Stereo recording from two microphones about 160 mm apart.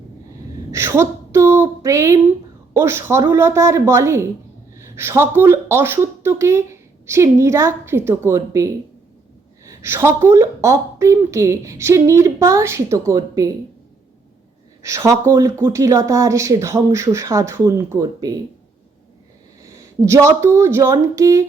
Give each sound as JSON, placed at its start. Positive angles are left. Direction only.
{"t": 0.7, "sound": "a woman's voice", "side_deg": -15}
{"t": 14.8, "sound": "a woman's voice", "side_deg": -20}
{"t": 20.0, "sound": "speech", "side_deg": -20}